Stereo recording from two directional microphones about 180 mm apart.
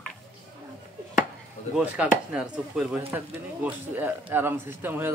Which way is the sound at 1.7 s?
5° right (ahead or behind).